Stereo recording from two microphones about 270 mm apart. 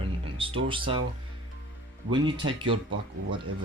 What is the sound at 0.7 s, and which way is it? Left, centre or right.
Speech, centre.